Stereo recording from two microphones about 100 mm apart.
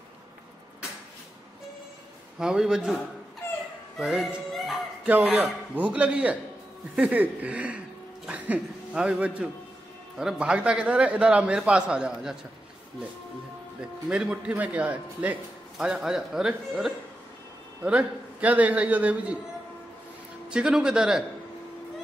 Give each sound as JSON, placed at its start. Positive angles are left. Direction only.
{"t": 2.3, "sound": "a man's voice", "side_deg": -5}
{"t": 3.4, "sound": "a sound", "side_deg": 25}
{"t": 4.0, "sound": "music", "side_deg": -5}
{"t": 5.3, "sound": "a man's voice", "side_deg": -15}
{"t": 13.7, "sound": "a man's voice", "side_deg": -5}
{"t": 15.8, "sound": "a man's voice", "side_deg": -5}
{"t": 20.4, "sound": "a man's voice", "side_deg": -10}